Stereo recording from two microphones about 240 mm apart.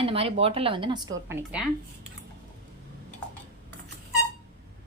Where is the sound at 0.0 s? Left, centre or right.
Right; by 1.6 s centre.